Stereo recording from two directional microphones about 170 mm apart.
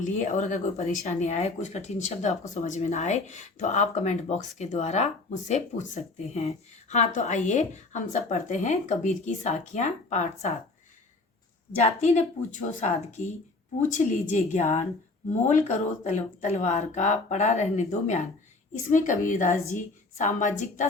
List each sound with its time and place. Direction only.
0.0 s speech: 45° left (ahead or behind)
11.8 s speech: 40° left (ahead or behind)